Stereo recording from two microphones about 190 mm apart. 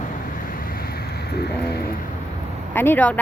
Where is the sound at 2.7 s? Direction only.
10° left (ahead or behind).